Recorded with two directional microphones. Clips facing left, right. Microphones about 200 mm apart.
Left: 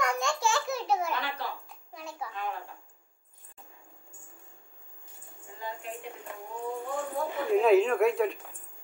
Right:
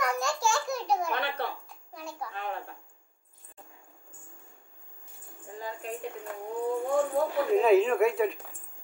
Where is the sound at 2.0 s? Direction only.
Centre (ahead or behind).